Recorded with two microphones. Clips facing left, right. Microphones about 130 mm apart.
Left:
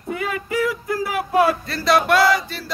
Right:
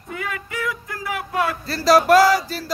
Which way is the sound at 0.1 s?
25° left (ahead or behind).